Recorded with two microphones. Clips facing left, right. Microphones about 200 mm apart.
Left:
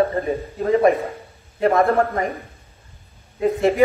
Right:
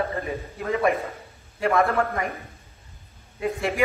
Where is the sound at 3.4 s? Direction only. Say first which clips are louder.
Left 8 dB; 30° left (ahead or behind).